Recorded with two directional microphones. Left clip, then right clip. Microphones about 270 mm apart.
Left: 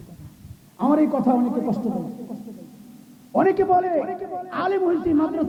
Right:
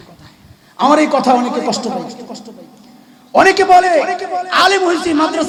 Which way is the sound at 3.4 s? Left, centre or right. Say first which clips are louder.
Right 10 dB; centre.